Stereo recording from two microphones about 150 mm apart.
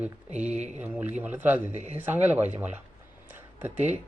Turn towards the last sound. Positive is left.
turn(degrees=-10)  # may be behind; listen again after turning